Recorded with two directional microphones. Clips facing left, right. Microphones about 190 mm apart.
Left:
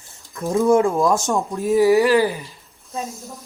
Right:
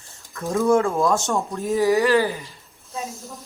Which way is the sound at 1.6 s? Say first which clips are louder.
Left 5 dB; 15° left (ahead or behind).